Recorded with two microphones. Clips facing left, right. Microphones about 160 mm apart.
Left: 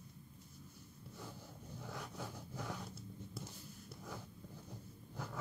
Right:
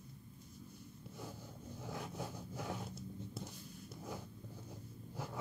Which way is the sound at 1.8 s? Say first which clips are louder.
Right 3 dB; 20° right (ahead or behind).